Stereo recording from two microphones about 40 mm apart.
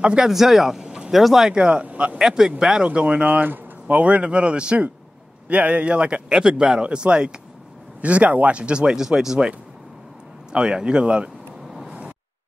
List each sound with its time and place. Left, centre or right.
0.2 s speech: centre
0.8 s a sound: right
1.1 s speech: centre
1.5 s speech: right
2.1 s speech: centre
2.9 s speech: right
3.3 s speech: right
8.0 s speech: right; by 9.5 s centre
10.5 s speech: right